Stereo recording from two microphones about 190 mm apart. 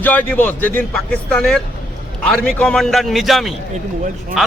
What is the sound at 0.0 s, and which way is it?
A man's voice, 10° left (ahead or behind).